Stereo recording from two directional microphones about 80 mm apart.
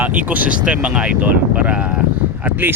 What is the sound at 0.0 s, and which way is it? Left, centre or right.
Speech, centre.